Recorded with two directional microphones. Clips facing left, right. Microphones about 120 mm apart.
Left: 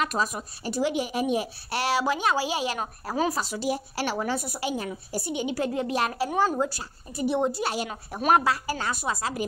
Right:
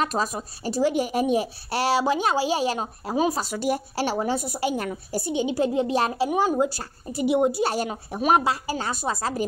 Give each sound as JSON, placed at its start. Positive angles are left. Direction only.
{"t": 0.0, "sound": "a woman's voice", "side_deg": -35}
{"t": 3.3, "sound": "speech", "side_deg": -50}
{"t": 3.9, "sound": "a woman's voice", "side_deg": -30}
{"t": 7.6, "sound": "speech", "side_deg": -45}
{"t": 8.3, "sound": "a woman's voice", "side_deg": -20}